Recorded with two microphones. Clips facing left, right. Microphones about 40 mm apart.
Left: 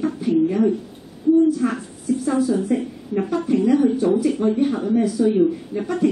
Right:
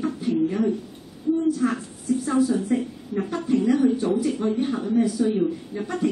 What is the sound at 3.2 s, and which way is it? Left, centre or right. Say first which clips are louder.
Speech: left 5 dB; centre.